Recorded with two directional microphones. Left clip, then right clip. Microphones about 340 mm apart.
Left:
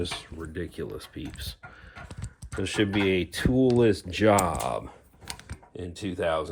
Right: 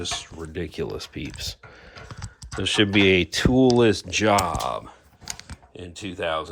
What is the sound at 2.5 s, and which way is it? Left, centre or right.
Speech, centre.